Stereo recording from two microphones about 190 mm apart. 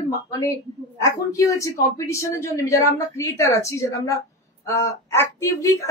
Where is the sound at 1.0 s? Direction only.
15° left (ahead or behind).